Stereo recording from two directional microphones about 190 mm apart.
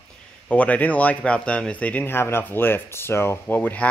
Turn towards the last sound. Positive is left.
turn(degrees=10)  # may be behind; listen again after turning